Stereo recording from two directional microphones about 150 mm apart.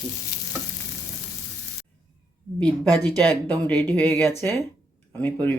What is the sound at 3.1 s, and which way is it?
Speech, 10° left (ahead or behind).